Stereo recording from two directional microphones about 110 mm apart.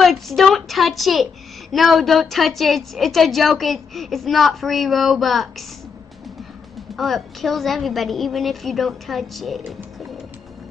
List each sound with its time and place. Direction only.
0.0 s a woman's voice: centre (ahead or behind)
7.0 s a woman's voice: centre (ahead or behind)